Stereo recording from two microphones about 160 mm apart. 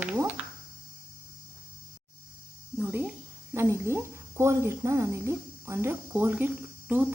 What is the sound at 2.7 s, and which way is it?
A woman's voice, 15° right (ahead or behind).